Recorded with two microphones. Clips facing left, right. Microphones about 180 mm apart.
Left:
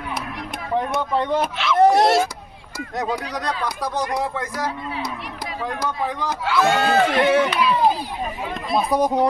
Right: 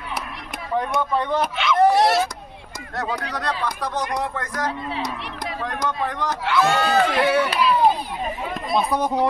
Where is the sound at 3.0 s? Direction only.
15° left (ahead or behind).